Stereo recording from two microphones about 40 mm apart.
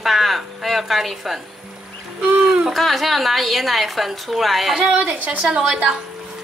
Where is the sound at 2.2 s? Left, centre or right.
Right.